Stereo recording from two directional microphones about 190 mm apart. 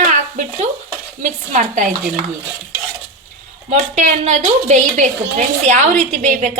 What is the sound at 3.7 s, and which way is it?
A woman's voice, 40° right (ahead or behind).